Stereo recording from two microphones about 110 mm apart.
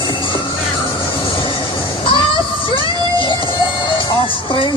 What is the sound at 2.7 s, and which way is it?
Music, 50° left (ahead or behind).